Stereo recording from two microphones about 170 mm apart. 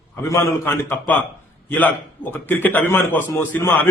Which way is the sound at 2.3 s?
10° left (ahead or behind).